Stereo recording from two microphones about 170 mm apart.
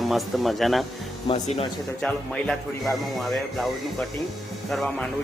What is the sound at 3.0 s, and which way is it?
Speech, centre (ahead or behind).